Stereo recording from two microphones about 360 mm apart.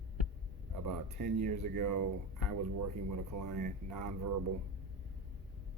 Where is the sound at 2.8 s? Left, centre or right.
Right.